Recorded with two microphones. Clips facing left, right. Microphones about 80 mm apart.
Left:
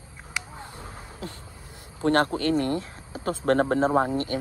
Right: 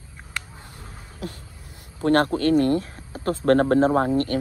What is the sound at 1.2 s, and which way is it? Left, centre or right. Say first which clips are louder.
Speech: right 5 dB; left.